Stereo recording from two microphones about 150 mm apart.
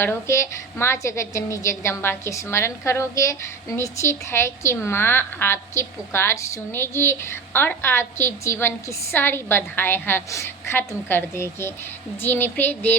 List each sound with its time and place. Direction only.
0.0 s a woman's voice: 15° left (ahead or behind)